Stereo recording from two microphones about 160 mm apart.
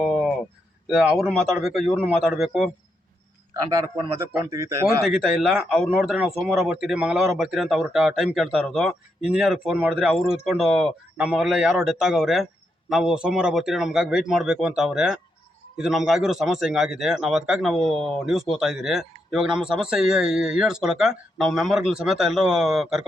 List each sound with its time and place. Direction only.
0.0 s a sound: centre (ahead or behind)
0.9 s speech: centre (ahead or behind)
3.5 s a man's voice: 20° right (ahead or behind)
5.0 s speech: centre (ahead or behind)